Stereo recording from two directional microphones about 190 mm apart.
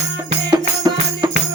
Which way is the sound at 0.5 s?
20° right (ahead or behind).